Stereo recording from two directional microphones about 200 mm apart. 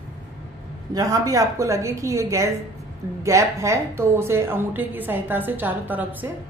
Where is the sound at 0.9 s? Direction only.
15° right (ahead or behind).